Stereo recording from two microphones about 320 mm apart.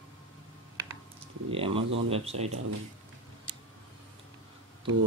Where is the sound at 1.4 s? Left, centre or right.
Centre.